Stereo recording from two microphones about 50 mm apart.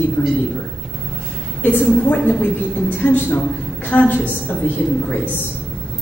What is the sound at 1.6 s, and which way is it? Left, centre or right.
A woman's voice, left.